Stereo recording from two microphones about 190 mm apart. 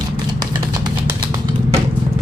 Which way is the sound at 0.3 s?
20° right (ahead or behind).